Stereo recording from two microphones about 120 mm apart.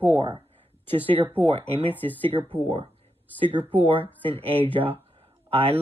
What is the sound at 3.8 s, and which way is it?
Speech, 45° right (ahead or behind).